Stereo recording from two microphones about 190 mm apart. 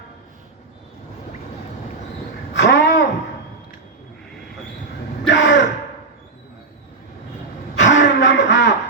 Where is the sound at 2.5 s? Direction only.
65° left (ahead or behind).